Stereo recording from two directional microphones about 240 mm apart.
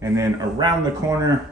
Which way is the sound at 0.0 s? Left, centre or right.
Centre.